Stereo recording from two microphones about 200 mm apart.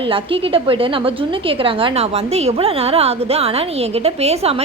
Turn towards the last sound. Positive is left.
turn(degrees=-30)  # may be behind; listen again after turning